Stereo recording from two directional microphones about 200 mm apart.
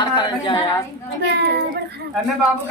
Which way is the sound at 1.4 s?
55° right (ahead or behind).